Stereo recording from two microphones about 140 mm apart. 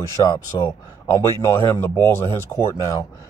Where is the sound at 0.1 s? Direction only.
20° left (ahead or behind).